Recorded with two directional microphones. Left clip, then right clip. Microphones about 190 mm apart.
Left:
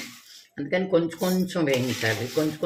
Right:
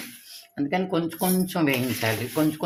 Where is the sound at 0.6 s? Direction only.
50° right (ahead or behind).